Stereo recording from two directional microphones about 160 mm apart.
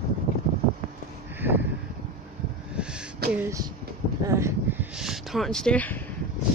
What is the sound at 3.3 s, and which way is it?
Speech, 15° right (ahead or behind).